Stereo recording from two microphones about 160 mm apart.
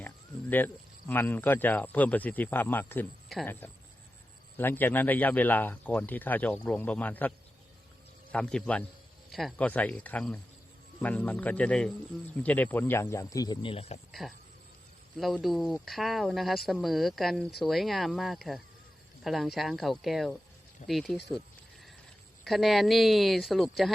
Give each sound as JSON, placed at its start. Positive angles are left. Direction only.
{"t": 0.5, "sound": "speech", "side_deg": 10}
{"t": 14.1, "sound": "speech", "side_deg": 0}
{"t": 22.4, "sound": "speech", "side_deg": 0}